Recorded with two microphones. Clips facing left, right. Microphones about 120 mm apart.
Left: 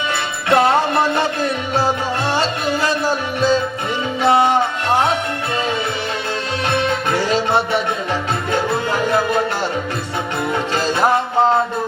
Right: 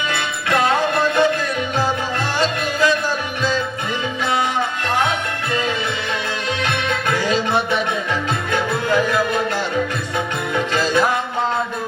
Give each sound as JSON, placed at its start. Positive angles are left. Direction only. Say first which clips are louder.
{"t": 0.1, "sound": "music", "louder": "left 6 dB", "side_deg": 30}
{"t": 6.7, "sound": "music", "louder": "left 5 dB", "side_deg": 30}
{"t": 10.8, "sound": "music", "louder": "left 2 dB", "side_deg": 30}